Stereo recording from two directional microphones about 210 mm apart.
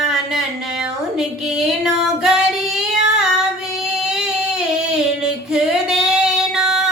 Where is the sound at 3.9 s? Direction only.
Centre (ahead or behind).